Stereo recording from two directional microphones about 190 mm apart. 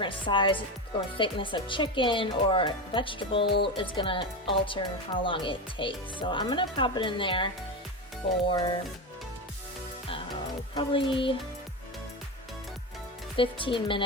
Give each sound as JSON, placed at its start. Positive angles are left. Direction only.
{"t": 0.0, "sound": "speech", "side_deg": 25}
{"t": 10.8, "sound": "speech", "side_deg": 25}
{"t": 13.3, "sound": "speech", "side_deg": 25}